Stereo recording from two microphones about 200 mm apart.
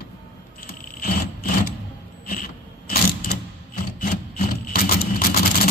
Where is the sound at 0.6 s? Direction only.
45° left (ahead or behind).